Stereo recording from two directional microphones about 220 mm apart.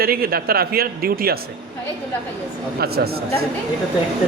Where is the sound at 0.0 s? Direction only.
45° right (ahead or behind).